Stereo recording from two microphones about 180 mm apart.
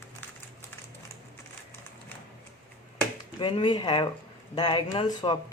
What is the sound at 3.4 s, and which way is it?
Speech, 25° left (ahead or behind).